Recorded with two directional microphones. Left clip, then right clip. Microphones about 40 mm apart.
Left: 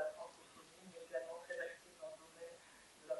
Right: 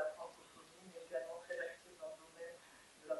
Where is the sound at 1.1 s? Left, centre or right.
Centre.